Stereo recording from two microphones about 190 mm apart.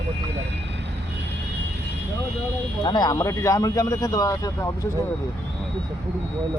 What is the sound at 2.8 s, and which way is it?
Speech, 20° left (ahead or behind).